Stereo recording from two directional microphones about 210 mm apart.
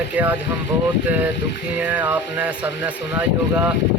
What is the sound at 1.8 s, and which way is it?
Speech, 10° right (ahead or behind).